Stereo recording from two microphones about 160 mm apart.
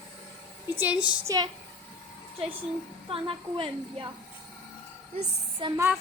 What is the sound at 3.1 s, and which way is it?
Speech, 35° right (ahead or behind).